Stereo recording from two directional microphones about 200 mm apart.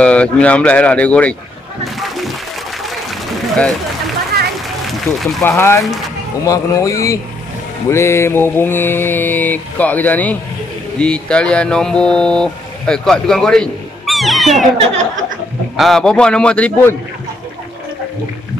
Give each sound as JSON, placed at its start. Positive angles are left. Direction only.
{"t": 0.0, "sound": "mantra", "side_deg": 5}
{"t": 2.0, "sound": "a sound", "side_deg": 0}
{"t": 5.4, "sound": "mantra", "side_deg": 10}
{"t": 11.0, "sound": "speech", "side_deg": 5}
{"t": 15.7, "sound": "a man's voice", "side_deg": 0}